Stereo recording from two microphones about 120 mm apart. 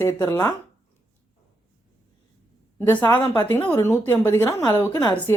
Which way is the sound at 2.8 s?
15° left (ahead or behind).